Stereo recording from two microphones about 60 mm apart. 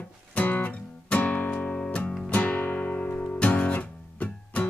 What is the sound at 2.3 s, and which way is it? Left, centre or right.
Guitar, left.